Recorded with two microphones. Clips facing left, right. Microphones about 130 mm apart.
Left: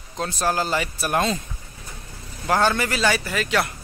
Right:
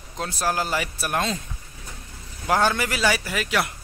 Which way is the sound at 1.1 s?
5° left (ahead or behind).